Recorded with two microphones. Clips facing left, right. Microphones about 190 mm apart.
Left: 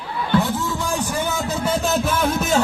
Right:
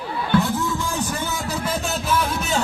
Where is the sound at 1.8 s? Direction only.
45° left (ahead or behind).